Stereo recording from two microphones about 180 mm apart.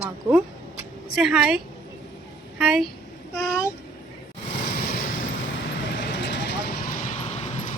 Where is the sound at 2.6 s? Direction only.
Centre (ahead or behind).